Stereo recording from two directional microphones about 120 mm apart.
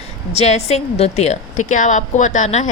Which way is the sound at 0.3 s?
65° left (ahead or behind).